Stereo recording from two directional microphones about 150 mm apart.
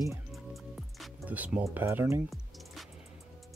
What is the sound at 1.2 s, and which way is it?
Speech, 10° right (ahead or behind).